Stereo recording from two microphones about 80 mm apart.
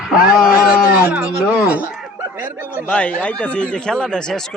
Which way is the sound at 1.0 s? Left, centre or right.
Centre.